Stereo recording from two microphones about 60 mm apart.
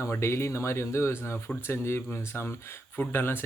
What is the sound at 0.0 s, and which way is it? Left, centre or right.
Speech, left.